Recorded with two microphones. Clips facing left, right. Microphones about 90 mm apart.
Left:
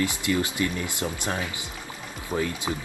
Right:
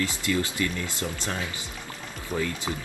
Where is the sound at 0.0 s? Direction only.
20° left (ahead or behind).